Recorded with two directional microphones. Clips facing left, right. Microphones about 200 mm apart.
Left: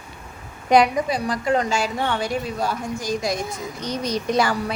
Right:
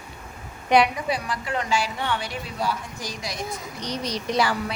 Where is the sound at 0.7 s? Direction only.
40° left (ahead or behind).